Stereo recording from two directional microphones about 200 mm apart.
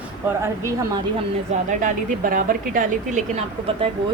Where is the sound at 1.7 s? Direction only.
40° right (ahead or behind).